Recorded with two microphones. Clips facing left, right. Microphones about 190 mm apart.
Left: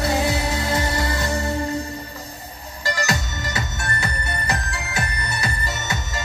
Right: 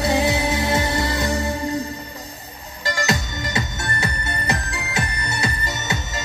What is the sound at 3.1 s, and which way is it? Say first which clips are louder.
Music: right 2 dB; 20° right (ahead or behind).